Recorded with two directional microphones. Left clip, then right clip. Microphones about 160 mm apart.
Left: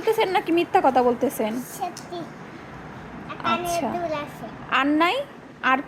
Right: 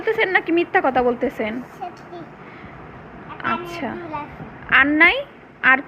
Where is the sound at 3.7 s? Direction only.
15° left (ahead or behind).